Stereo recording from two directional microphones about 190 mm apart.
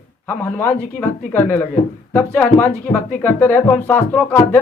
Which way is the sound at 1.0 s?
10° left (ahead or behind).